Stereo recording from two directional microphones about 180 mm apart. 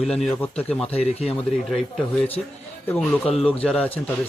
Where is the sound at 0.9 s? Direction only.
35° left (ahead or behind).